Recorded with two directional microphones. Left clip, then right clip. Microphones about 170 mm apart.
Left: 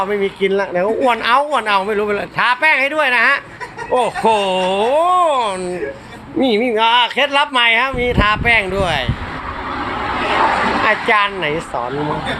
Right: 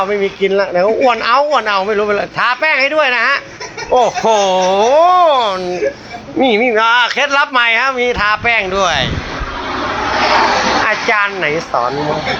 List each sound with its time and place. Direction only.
0.0 s speech: 15° left (ahead or behind)
10.8 s speech: 20° left (ahead or behind)